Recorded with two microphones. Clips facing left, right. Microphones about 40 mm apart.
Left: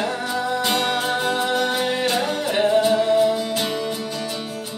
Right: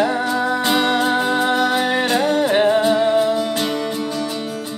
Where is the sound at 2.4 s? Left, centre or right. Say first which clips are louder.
Right 1 dB; right.